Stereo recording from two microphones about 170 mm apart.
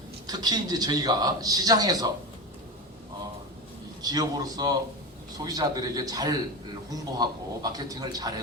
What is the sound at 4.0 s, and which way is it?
Speech, 20° right (ahead or behind).